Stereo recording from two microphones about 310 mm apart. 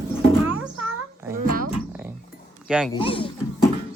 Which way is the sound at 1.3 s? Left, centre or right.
Right.